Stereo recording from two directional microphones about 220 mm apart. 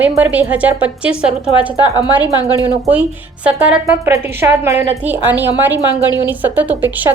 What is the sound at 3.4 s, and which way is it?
A woman's voice, 10° right (ahead or behind).